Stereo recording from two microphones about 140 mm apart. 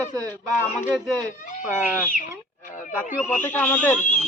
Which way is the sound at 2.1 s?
70° left (ahead or behind).